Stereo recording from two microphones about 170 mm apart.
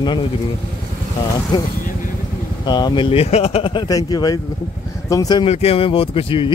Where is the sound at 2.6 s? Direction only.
25° left (ahead or behind).